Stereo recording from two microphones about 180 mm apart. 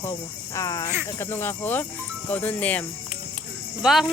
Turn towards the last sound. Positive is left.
turn(degrees=0)  # may be behind; listen again after turning